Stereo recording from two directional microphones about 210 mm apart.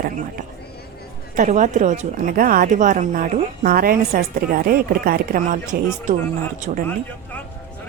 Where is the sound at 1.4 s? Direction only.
35° right (ahead or behind).